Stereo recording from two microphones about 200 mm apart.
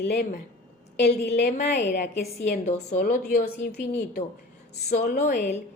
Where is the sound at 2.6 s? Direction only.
35° left (ahead or behind); by 3.8 s 55° left (ahead or behind).